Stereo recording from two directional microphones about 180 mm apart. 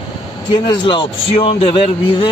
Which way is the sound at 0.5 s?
25° left (ahead or behind).